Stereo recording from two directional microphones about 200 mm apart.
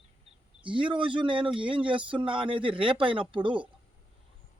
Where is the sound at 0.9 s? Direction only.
25° right (ahead or behind).